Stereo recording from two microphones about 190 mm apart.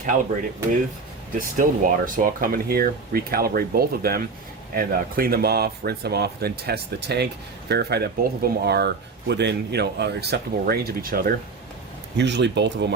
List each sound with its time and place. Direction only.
1.4 s speech: 45° right (ahead or behind)
12.1 s speech: 65° right (ahead or behind)